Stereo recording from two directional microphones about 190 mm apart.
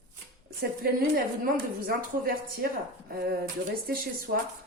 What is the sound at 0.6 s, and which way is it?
A woman's voice, 50° right (ahead or behind).